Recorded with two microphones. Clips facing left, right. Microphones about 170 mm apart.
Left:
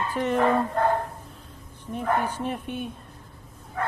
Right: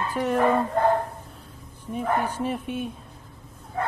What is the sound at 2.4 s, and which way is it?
Speech, 5° right (ahead or behind).